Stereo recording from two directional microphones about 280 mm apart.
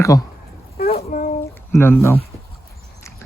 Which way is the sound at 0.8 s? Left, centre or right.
Left.